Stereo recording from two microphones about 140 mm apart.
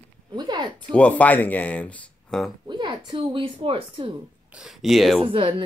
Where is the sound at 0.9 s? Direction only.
10° left (ahead or behind).